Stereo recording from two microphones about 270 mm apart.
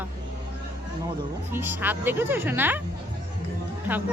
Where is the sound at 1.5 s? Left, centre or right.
Centre.